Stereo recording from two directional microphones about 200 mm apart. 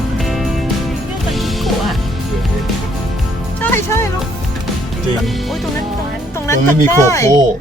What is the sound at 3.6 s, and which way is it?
Music, 10° left (ahead or behind).